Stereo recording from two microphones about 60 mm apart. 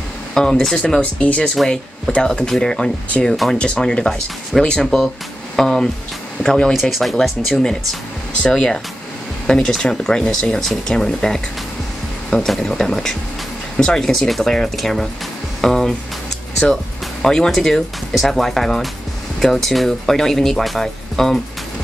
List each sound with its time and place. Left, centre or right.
0.3 s speech: centre
6.7 s speech: centre